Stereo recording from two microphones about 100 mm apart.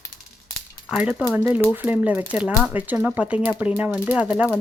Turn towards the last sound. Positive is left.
turn(degrees=-15)  # may be behind; listen again after turning